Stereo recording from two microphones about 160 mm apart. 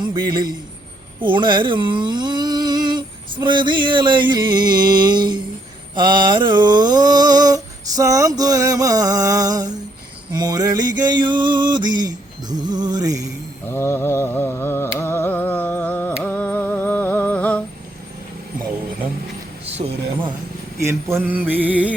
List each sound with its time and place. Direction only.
0.0 s a man's voice: 25° right (ahead or behind)
1.2 s a sound: 30° right (ahead or behind)
10.3 s mantra: 25° right (ahead or behind)
13.7 s mantra: 15° left (ahead or behind)
19.6 s a sound: 40° right (ahead or behind)
21.2 s mantra: 10° right (ahead or behind)